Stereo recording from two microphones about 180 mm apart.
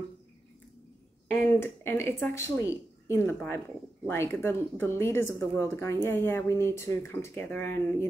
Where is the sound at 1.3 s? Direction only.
15° left (ahead or behind).